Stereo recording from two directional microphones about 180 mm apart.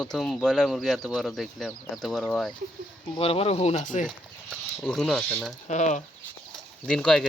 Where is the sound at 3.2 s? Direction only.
30° left (ahead or behind).